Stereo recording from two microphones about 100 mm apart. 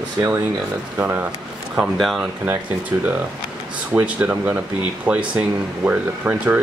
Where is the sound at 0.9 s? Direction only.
20° right (ahead or behind).